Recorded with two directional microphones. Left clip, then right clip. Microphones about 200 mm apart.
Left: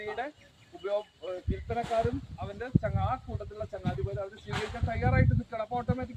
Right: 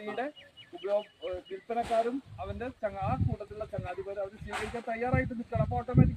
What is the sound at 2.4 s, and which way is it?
Speech, 5° right (ahead or behind).